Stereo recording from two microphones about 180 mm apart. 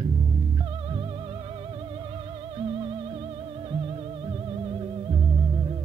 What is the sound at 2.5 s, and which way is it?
Music, 30° right (ahead or behind).